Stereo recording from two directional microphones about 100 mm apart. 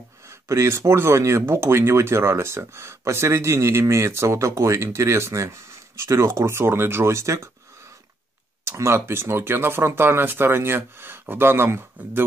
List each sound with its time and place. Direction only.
0.5 s speech: 30° right (ahead or behind)
8.6 s speech: 25° right (ahead or behind)